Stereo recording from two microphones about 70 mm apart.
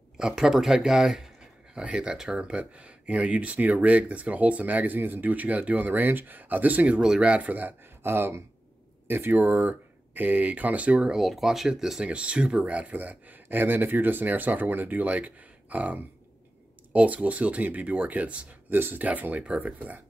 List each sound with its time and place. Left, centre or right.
0.2 s speech: centre; by 7.0 s right
7.0 s speech: centre
7.8 s speech: right; by 11.1 s centre
11.1 s speech: centre; by 20.0 s right